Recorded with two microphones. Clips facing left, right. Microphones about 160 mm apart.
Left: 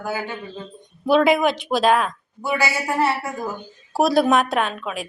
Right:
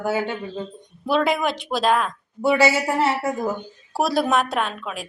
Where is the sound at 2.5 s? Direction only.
25° right (ahead or behind).